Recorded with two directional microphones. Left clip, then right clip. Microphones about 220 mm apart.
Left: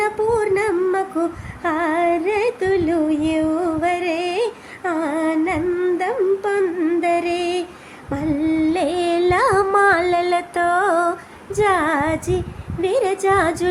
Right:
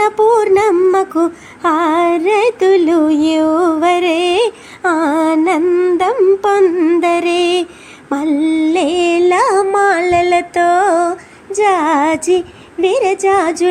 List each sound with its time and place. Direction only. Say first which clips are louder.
0.0 s music: right 8 dB; 25° right (ahead or behind)
8.1 s carnatic music: right 6 dB; 25° right (ahead or behind)
11.5 s a sound: right 5 dB; 15° right (ahead or behind)
12.8 s speech: right 6 dB; 15° right (ahead or behind)